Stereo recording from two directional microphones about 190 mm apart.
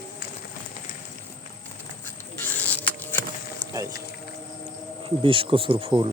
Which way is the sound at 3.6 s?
20° right (ahead or behind).